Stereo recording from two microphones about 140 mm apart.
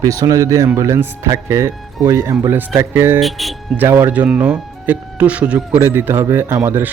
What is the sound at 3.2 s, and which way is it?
Speech, centre (ahead or behind).